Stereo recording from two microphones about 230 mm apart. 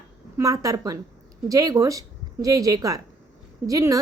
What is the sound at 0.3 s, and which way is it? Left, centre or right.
Speech, centre.